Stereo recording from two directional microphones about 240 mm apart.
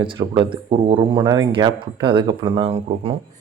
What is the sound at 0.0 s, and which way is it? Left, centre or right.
Speech, centre.